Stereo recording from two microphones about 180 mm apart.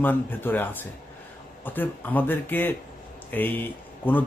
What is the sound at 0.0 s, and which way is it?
A man's voice, 10° left (ahead or behind).